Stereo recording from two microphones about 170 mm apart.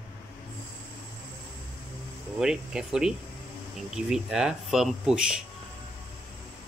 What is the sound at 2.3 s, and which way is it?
Speech, 5° right (ahead or behind).